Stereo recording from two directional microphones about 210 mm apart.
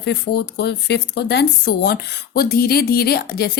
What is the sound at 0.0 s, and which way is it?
Speech, 50° left (ahead or behind).